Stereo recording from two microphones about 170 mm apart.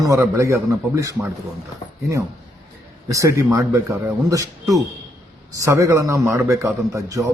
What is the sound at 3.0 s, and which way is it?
Speech, 20° right (ahead or behind).